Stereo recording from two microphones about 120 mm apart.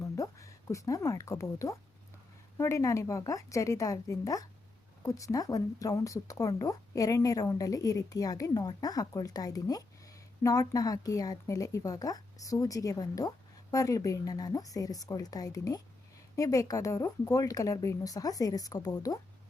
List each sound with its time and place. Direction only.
0.0 s speech: 25° left (ahead or behind)